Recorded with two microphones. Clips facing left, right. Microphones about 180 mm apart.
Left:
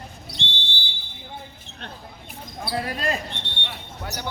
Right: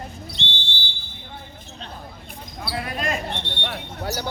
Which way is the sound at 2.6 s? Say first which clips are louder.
Left 1 dB; 35° left (ahead or behind).